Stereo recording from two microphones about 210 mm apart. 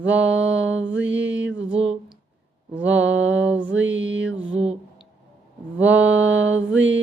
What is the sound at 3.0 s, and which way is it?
Music, 65° right (ahead or behind).